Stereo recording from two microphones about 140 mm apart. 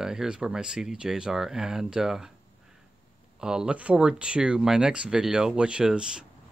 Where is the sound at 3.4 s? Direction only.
5° right (ahead or behind).